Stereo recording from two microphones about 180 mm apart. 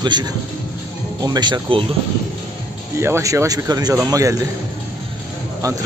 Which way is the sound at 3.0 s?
15° right (ahead or behind).